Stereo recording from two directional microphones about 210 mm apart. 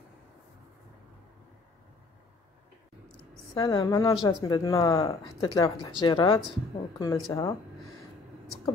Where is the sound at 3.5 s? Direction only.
20° left (ahead or behind).